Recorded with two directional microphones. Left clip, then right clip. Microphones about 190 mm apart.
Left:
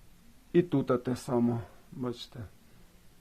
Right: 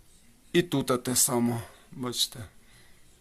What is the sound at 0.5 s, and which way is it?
Speech, 5° right (ahead or behind).